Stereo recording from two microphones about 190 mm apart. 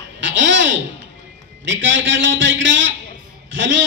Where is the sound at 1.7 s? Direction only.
80° right.